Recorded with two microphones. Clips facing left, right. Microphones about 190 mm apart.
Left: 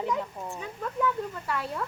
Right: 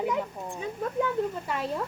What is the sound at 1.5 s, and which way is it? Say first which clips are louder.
Speech: right 2 dB; 20° right (ahead or behind).